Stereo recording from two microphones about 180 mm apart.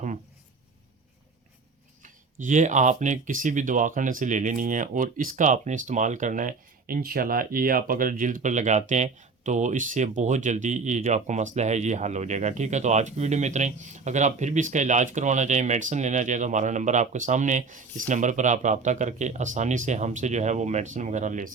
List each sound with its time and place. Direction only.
2.4 s speech: 45° right (ahead or behind)